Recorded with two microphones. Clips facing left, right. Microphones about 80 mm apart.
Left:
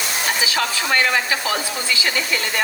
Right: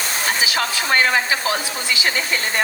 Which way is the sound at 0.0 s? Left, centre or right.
Right.